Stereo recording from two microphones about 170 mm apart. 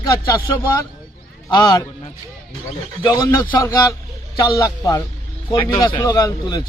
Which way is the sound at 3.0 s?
20° left (ahead or behind).